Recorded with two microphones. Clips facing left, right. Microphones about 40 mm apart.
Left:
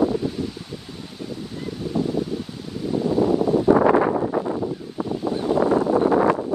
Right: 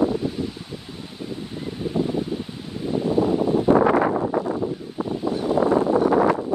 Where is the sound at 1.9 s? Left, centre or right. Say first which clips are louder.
Even; right.